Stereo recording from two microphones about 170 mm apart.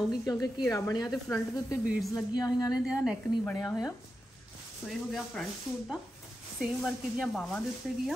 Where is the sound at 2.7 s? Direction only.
5° right (ahead or behind).